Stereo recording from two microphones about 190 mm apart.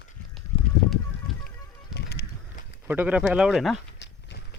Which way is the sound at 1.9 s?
60° left (ahead or behind).